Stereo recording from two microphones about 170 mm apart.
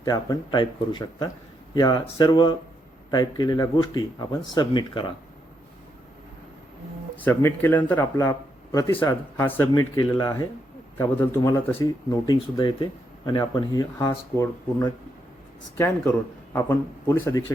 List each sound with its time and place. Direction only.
0.0 s speech: 25° left (ahead or behind)
7.3 s speech: 10° left (ahead or behind)
12.2 s speech: 25° left (ahead or behind)
15.8 s speech: 15° left (ahead or behind)